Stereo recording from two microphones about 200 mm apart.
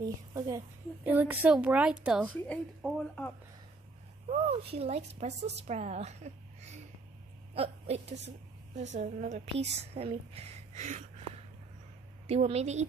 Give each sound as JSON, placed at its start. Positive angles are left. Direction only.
{"t": 0.0, "sound": "a woman's voice", "side_deg": -15}
{"t": 2.2, "sound": "speech", "side_deg": 5}
{"t": 4.3, "sound": "a woman's voice", "side_deg": -30}
{"t": 12.3, "sound": "a woman's voice", "side_deg": -30}